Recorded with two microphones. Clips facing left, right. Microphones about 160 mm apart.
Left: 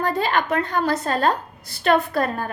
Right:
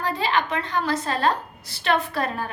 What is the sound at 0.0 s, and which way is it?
A woman's voice, 50° left (ahead or behind).